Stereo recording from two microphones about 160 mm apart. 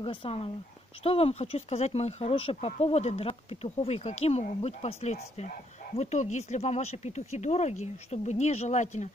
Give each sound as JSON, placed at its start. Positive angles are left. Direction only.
{"t": 0.0, "sound": "speech", "side_deg": 35}